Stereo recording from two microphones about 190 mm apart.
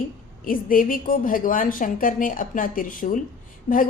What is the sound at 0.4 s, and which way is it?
A woman's voice, 45° left (ahead or behind).